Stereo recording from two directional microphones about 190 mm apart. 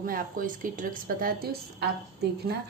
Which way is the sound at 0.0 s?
45° right (ahead or behind).